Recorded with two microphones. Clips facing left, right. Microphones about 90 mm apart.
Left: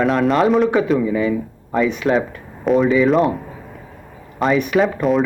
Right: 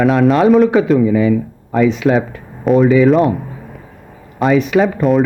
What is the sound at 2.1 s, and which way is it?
A man's voice, centre (ahead or behind).